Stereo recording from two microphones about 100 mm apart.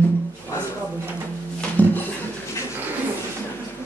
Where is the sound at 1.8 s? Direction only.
15° left (ahead or behind).